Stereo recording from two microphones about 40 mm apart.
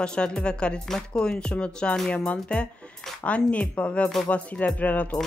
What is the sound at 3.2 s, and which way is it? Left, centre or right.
Speech, left.